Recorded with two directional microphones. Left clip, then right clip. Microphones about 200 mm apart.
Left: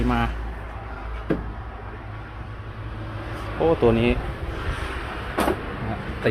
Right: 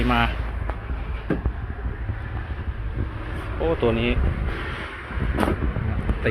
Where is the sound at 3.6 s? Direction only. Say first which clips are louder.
Left 3 dB; 35° left (ahead or behind).